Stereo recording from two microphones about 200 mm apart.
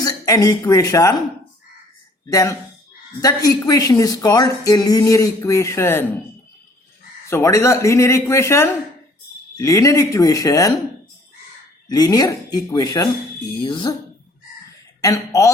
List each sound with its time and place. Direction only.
0.0 s speech: 15° left (ahead or behind)
2.2 s a woman's voice: 15° left (ahead or behind)
7.3 s a woman's voice: 15° left (ahead or behind)
11.9 s speech: 20° left (ahead or behind)
15.0 s a woman's voice: 15° left (ahead or behind)